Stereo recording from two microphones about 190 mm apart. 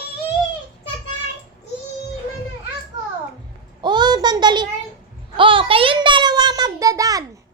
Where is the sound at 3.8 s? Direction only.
25° right (ahead or behind).